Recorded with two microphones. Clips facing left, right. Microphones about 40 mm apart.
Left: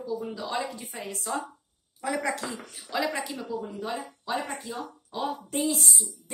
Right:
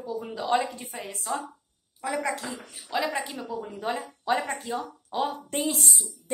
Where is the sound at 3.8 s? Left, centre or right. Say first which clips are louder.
Right 3 dB; right.